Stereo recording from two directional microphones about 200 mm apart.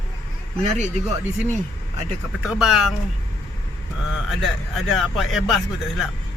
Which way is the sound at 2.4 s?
5° right (ahead or behind).